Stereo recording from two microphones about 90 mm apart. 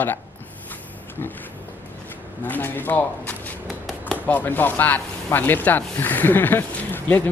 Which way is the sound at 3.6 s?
Centre (ahead or behind).